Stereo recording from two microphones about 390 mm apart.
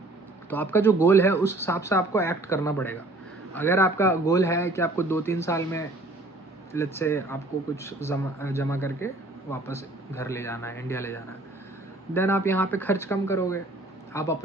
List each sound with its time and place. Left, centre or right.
0.5 s speech: centre